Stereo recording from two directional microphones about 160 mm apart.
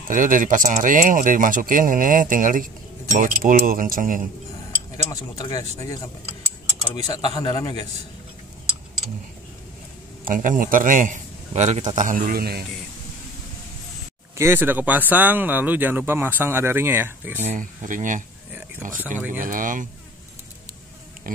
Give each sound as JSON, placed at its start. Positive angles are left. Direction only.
{"t": 0.1, "sound": "speech", "side_deg": -55}
{"t": 4.9, "sound": "speech", "side_deg": 25}
{"t": 6.9, "sound": "speech", "side_deg": 30}
{"t": 10.2, "sound": "a man's voice", "side_deg": -55}
{"t": 14.3, "sound": "speech", "side_deg": -15}
{"t": 17.4, "sound": "speech", "side_deg": -50}
{"t": 18.9, "sound": "speech", "side_deg": -10}
{"t": 19.4, "sound": "speech", "side_deg": -55}